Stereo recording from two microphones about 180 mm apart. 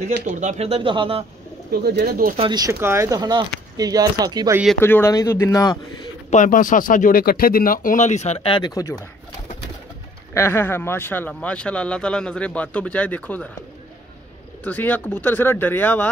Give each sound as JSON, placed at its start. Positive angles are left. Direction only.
{"t": 0.2, "sound": "speech", "side_deg": -40}
{"t": 1.7, "sound": "speech", "side_deg": -60}
{"t": 2.3, "sound": "speech", "side_deg": -25}
{"t": 4.7, "sound": "speech", "side_deg": 15}
{"t": 6.3, "sound": "speech", "side_deg": 45}
{"t": 10.3, "sound": "speech", "side_deg": 15}
{"t": 14.6, "sound": "speech", "side_deg": 10}